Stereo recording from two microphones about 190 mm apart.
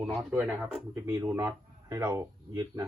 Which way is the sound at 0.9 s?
15° right (ahead or behind).